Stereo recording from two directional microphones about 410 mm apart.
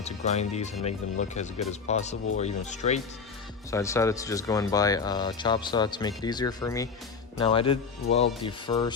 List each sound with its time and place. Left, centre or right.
0.0 s speech: centre